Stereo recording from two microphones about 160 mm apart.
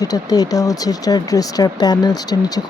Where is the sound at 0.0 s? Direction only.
25° left (ahead or behind).